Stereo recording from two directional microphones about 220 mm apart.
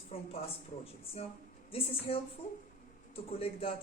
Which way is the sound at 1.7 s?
25° left (ahead or behind).